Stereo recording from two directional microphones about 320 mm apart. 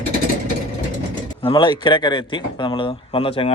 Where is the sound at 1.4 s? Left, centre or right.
Centre.